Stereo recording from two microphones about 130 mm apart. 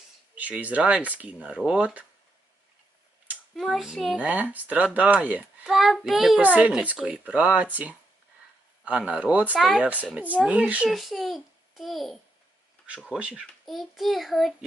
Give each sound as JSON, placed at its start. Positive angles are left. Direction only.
{"t": 0.3, "sound": "speech", "side_deg": -10}
{"t": 3.5, "sound": "a child's voice", "side_deg": 0}
{"t": 5.6, "sound": "a child's voice", "side_deg": 0}
{"t": 9.6, "sound": "a child's voice", "side_deg": 0}